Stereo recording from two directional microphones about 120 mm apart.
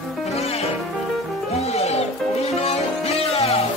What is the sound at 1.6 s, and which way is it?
Music, 60° left (ahead or behind).